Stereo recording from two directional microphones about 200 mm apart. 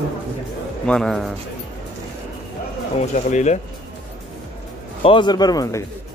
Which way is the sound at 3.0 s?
35° left (ahead or behind).